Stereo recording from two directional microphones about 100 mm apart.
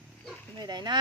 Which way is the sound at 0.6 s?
45° right (ahead or behind).